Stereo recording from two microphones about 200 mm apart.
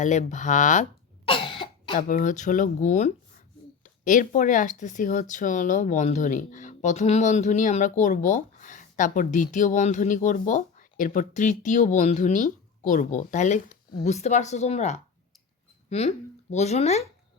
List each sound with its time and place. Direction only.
0.0 s cough: 35° left (ahead or behind)
2.0 s speech: 40° left (ahead or behind)